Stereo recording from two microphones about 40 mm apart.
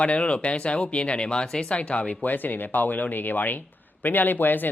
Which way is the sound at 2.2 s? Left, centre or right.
Left.